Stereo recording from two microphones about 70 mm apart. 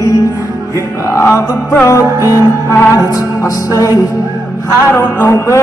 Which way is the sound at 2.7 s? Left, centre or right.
Left.